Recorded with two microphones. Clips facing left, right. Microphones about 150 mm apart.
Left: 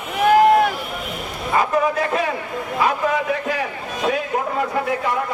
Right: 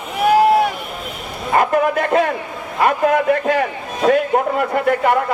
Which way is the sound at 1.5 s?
60° right (ahead or behind).